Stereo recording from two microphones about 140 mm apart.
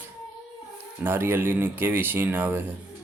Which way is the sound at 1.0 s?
15° right (ahead or behind).